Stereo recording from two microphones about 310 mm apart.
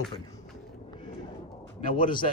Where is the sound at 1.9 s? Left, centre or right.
Centre.